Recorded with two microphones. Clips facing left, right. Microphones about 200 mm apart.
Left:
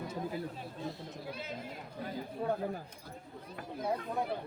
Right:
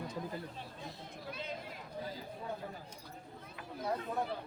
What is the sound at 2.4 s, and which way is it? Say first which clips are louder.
Speech: left 9 dB; 55° left (ahead or behind).